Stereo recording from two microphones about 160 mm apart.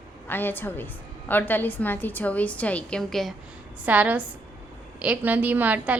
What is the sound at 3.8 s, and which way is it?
A woman's voice, 10° right (ahead or behind).